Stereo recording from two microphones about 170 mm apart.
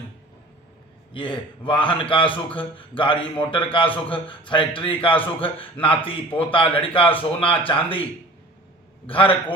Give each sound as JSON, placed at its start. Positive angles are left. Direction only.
{"t": 1.1, "sound": "a man's voice", "side_deg": 30}
{"t": 9.0, "sound": "speech", "side_deg": 30}